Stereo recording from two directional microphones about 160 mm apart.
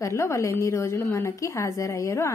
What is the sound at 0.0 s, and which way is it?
A woman's voice, 15° left (ahead or behind).